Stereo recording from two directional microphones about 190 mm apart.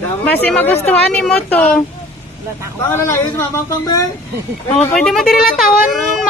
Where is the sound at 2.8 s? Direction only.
15° left (ahead or behind).